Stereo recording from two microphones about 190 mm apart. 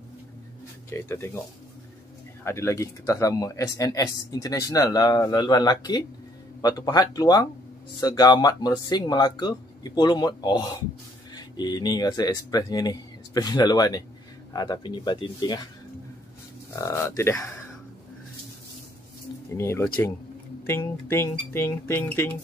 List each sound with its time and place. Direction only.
0.8 s speech: 15° left (ahead or behind)
2.4 s speech: 15° left (ahead or behind)
16.7 s speech: 15° left (ahead or behind)
19.5 s speech: 15° left (ahead or behind)